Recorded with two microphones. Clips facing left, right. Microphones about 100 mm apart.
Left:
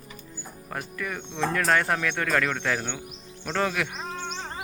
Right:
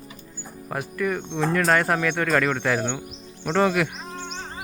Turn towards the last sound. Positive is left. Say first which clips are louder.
# right 6 dB
turn(degrees=-5)  # may be behind; listen again after turning